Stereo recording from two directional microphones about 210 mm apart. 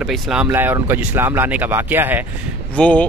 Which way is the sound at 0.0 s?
Centre (ahead or behind).